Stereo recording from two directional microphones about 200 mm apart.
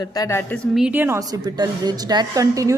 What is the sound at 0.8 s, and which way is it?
A woman's voice, 10° right (ahead or behind).